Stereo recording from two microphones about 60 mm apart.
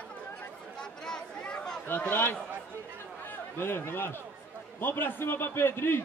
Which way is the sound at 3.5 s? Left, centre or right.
Left.